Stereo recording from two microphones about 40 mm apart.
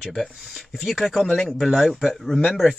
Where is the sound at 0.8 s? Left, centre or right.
Centre.